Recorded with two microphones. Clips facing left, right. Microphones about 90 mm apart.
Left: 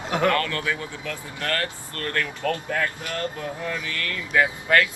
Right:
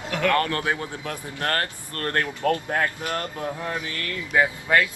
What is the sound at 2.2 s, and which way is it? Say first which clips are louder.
Speech: right 3 dB; 25° right (ahead or behind).